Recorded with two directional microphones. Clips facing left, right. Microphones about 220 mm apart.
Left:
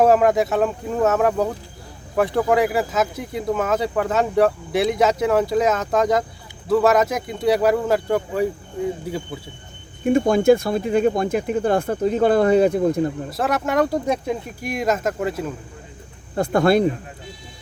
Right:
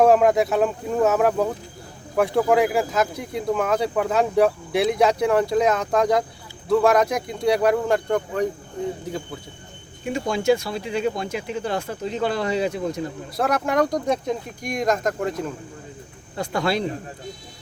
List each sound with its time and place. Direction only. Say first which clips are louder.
0.0 s speech: even; centre (ahead or behind)
10.0 s speech: left 8 dB; 50° left (ahead or behind)
13.3 s speech: right 2 dB; centre (ahead or behind)
16.3 s speech: left 7 dB; 50° left (ahead or behind)